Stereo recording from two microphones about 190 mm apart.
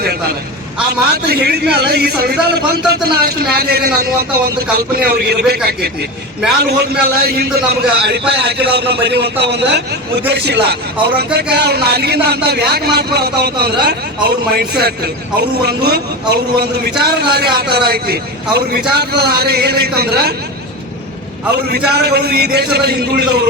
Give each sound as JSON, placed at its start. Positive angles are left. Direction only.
{"t": 0.9, "sound": "a man's voice", "side_deg": -60}
{"t": 21.5, "sound": "a man's voice", "side_deg": -60}